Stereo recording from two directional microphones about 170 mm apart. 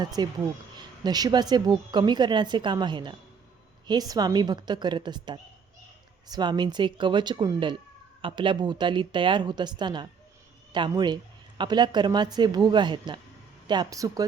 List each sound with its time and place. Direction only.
0.0 s a woman's voice: 25° right (ahead or behind)